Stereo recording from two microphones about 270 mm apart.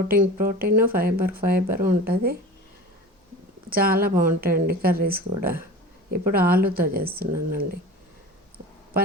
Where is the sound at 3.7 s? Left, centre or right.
Right.